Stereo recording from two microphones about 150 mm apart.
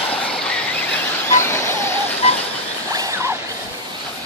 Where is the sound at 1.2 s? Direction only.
20° left (ahead or behind).